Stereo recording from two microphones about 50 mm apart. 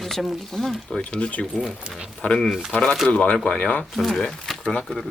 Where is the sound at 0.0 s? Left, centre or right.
Centre.